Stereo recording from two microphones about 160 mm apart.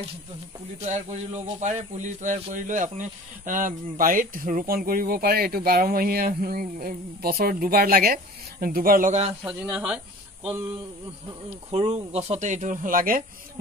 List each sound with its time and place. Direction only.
0.8 s speech: 45° right (ahead or behind)
9.4 s speech: 5° right (ahead or behind)
11.9 s speech: 40° right (ahead or behind); by 13.2 s 60° right (ahead or behind)